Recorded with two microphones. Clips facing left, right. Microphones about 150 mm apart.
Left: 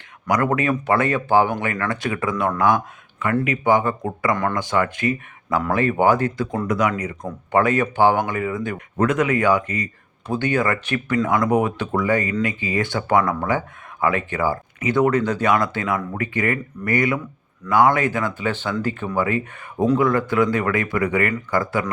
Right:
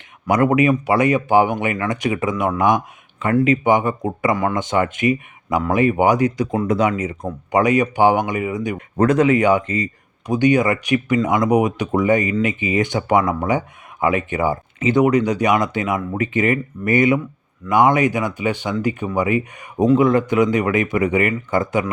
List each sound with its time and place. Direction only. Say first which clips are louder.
0.3 s speech: right 5 dB; 20° right (ahead or behind)
7.3 s speech: right 2 dB; 15° right (ahead or behind)
9.0 s speech: right 4 dB; 35° right (ahead or behind)
9.2 s speech: right 4 dB; 20° right (ahead or behind)